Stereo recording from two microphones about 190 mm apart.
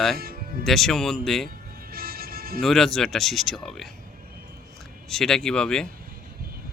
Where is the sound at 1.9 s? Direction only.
50° right (ahead or behind).